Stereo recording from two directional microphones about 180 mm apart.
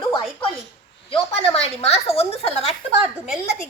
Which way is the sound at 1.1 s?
30° left (ahead or behind).